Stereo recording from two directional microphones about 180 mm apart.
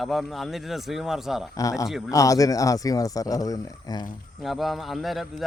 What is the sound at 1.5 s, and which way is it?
Speech, 20° left (ahead or behind).